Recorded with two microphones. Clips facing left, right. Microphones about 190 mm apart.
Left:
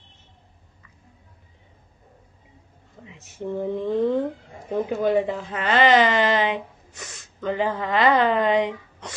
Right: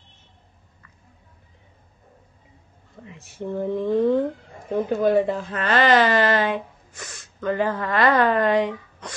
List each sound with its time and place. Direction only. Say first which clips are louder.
3.1 s speech: even; 15° left (ahead or behind)